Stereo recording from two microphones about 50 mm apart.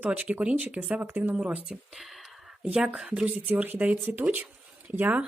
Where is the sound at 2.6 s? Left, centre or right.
Centre.